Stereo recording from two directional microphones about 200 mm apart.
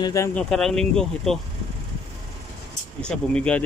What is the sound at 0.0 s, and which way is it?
Speech, 15° left (ahead or behind).